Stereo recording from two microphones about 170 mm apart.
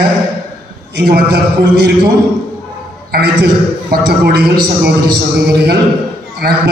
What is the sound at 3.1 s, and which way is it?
A man's voice, 65° right (ahead or behind).